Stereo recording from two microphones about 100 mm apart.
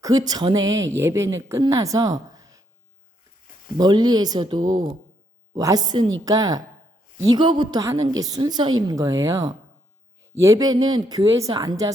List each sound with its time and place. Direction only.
0.0 s a woman's voice: 40° right (ahead or behind)
3.8 s speech: 45° right (ahead or behind)
5.5 s speech: 35° right (ahead or behind)
7.3 s speech: 50° right (ahead or behind)